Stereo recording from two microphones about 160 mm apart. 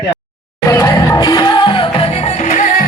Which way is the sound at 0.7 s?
20° left (ahead or behind).